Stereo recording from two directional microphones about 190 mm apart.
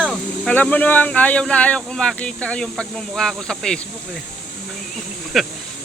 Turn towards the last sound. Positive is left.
turn(degrees=0)  # may be behind; listen again after turning